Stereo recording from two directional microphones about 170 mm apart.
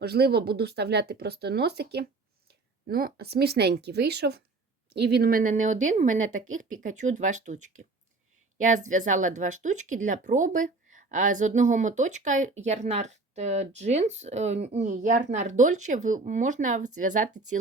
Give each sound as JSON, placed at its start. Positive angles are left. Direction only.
{"t": 0.0, "sound": "speech", "side_deg": -70}
{"t": 2.8, "sound": "speech", "side_deg": -60}